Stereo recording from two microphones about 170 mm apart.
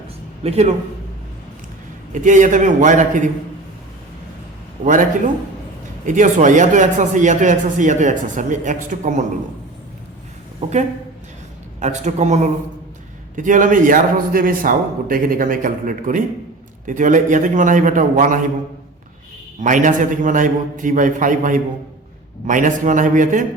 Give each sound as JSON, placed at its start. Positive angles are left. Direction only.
{"t": 0.4, "sound": "speech", "side_deg": -40}
{"t": 2.2, "sound": "a man's voice", "side_deg": -50}
{"t": 4.9, "sound": "a man's voice", "side_deg": -50}
{"t": 11.8, "sound": "a man's voice", "side_deg": -45}
{"t": 19.6, "sound": "a man's voice", "side_deg": -50}